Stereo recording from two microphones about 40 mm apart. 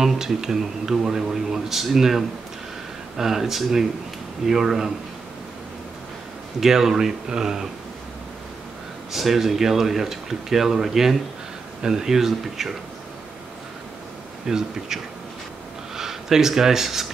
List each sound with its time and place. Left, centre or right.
0.0 s speech: centre
6.6 s speech: centre
9.1 s speech: centre
14.5 s speech: centre
16.0 s speech: centre